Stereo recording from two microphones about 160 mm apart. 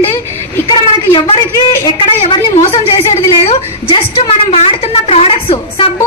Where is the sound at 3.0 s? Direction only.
35° left (ahead or behind).